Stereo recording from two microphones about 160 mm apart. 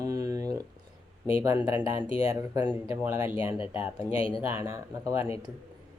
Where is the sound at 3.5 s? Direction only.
35° left (ahead or behind).